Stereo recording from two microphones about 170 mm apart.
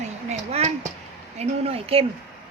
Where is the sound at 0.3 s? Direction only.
40° right (ahead or behind).